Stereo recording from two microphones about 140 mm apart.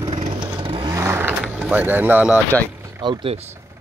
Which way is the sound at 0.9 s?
15° right (ahead or behind).